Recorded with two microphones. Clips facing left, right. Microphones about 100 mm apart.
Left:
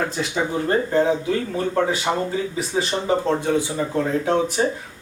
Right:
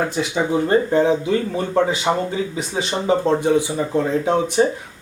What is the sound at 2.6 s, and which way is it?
Speech, centre (ahead or behind).